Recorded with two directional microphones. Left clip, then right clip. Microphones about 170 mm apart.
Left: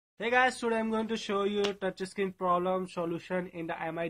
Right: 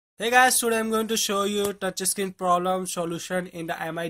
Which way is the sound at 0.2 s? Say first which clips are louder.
Right 8 dB; 35° right (ahead or behind).